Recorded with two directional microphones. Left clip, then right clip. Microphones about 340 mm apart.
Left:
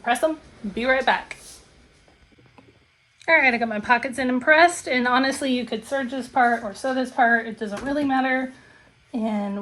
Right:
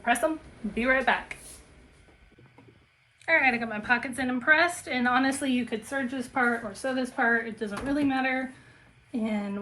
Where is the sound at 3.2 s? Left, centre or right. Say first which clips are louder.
Left 6 dB; centre.